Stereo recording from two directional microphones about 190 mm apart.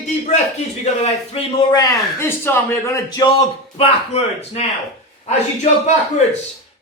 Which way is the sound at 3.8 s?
35° left (ahead or behind).